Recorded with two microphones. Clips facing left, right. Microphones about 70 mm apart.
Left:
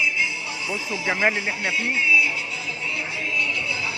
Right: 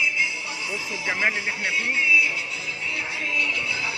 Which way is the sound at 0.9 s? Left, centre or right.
Left.